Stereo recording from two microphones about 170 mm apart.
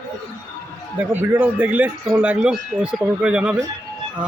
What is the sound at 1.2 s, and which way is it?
Speech, 10° right (ahead or behind).